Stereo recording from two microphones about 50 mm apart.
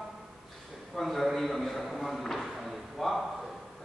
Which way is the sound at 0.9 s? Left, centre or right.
Centre.